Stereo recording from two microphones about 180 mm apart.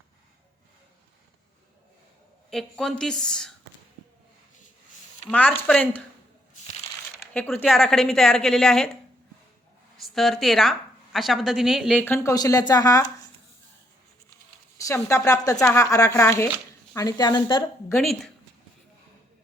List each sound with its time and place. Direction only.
2.5 s a woman's voice: centre (ahead or behind)
5.3 s speech: 10° left (ahead or behind)
7.3 s a woman's voice: 10° left (ahead or behind)
10.0 s a woman's voice: centre (ahead or behind)
12.0 s speech: 15° left (ahead or behind)
14.8 s speech: 15° left (ahead or behind)